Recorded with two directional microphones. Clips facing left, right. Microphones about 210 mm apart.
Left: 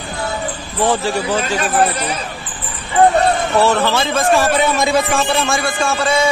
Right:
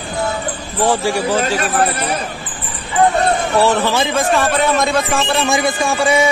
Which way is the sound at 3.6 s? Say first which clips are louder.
Even; 15° right (ahead or behind).